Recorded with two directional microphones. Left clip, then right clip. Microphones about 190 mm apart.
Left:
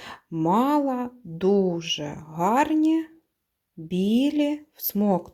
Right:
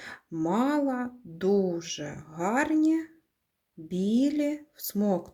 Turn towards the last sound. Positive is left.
turn(degrees=25)  # may be behind; listen again after turning